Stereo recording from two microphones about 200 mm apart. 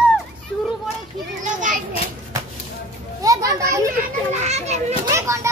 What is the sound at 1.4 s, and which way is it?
Children playing, 40° right (ahead or behind).